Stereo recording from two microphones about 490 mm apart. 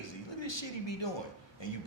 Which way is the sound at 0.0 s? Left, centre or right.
Left.